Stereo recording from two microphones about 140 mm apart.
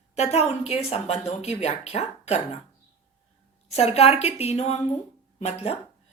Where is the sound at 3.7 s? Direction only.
50° left (ahead or behind).